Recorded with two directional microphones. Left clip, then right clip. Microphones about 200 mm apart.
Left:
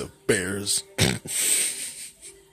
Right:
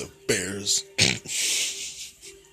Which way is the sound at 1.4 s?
30° left (ahead or behind).